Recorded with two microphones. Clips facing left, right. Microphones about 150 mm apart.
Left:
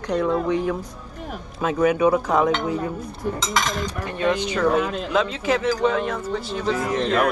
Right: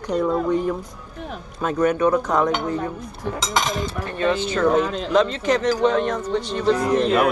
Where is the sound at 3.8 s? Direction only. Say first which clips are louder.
Right 1 dB; 15° left (ahead or behind).